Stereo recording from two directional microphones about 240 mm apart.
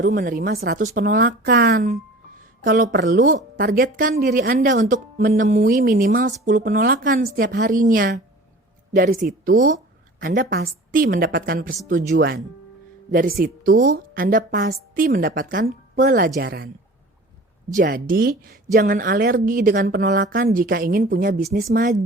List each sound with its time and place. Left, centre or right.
0.0 s a woman's voice: right
17.7 s a woman's voice: right